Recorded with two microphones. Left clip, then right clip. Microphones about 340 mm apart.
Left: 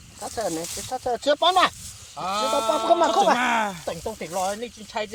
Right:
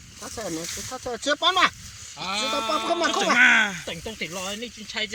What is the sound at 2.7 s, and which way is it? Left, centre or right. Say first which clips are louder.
Speech: left 6 dB; left.